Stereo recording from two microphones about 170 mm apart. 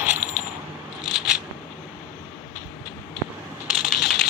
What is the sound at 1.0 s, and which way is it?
Scissors, 5° right (ahead or behind).